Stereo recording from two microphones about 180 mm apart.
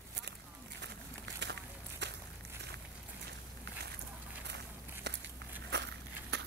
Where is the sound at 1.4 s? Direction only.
70° right (ahead or behind).